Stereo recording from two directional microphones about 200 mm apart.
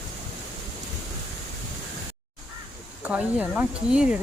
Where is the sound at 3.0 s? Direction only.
5° right (ahead or behind).